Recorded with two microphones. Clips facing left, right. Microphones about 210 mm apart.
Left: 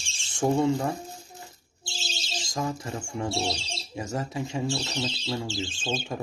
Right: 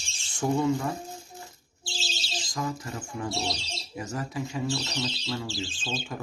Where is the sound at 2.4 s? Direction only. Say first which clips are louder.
Left 2 dB; 25° left (ahead or behind).